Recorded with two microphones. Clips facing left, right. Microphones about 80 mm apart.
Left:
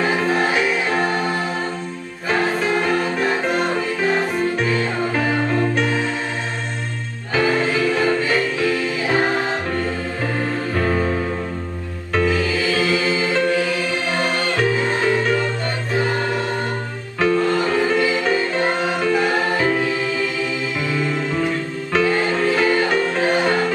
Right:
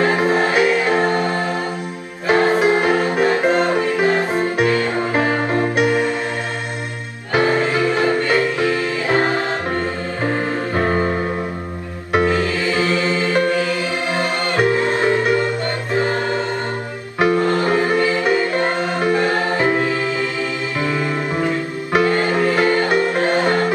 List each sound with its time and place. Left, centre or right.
0.0 s music: centre
2.5 s music: centre
7.3 s music: centre
9.0 s music: centre
9.8 s music: right
12.1 s music: centre
12.7 s music: centre
14.1 s music: centre
17.3 s music: centre
19.6 s music: centre